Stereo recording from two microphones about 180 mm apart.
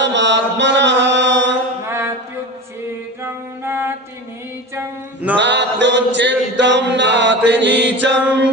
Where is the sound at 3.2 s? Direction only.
15° right (ahead or behind).